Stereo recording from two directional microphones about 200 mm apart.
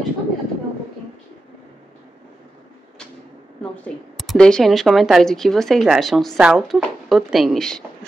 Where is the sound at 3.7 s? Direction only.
5° left (ahead or behind).